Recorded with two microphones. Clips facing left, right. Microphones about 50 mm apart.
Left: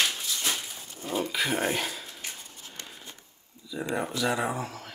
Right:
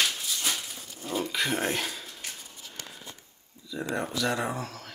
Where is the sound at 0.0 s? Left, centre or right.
Centre.